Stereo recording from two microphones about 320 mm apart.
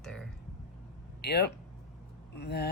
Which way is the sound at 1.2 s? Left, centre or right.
Left.